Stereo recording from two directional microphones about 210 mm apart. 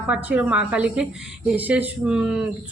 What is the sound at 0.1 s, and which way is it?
Speech, 5° right (ahead or behind).